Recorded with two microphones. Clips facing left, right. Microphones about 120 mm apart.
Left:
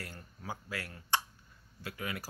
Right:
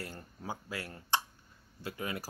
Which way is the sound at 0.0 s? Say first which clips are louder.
Right 3 dB; 25° right (ahead or behind).